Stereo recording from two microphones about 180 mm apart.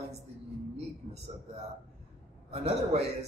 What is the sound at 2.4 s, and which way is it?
Speech, 35° right (ahead or behind).